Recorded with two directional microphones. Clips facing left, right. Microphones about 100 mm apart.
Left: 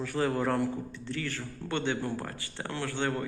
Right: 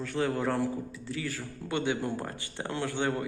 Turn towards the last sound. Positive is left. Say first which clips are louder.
# right 1 dB
turn(degrees=-15)  # may be behind; listen again after turning